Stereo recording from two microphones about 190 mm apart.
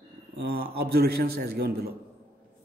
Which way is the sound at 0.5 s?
55° right (ahead or behind).